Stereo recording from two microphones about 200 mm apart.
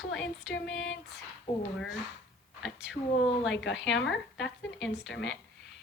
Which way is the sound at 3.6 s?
65° left (ahead or behind).